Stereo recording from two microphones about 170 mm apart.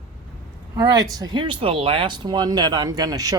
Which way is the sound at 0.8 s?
20° right (ahead or behind).